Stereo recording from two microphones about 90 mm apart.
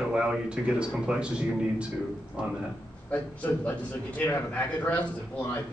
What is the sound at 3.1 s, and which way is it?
A man's voice, 20° left (ahead or behind).